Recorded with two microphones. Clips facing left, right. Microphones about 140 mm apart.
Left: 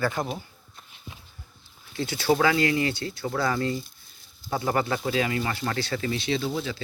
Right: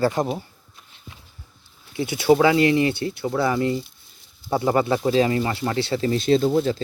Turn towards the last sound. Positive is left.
turn(degrees=-50)  # may be behind; listen again after turning